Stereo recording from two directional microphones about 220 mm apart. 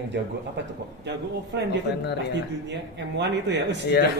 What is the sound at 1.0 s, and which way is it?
A woman's voice, 50° right (ahead or behind).